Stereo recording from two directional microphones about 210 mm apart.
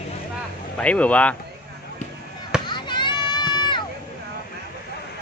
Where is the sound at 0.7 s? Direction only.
5° left (ahead or behind).